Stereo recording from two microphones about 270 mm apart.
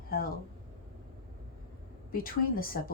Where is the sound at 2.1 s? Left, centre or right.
Left.